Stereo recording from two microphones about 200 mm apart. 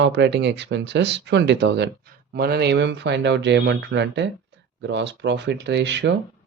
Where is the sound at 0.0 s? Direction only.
60° right (ahead or behind).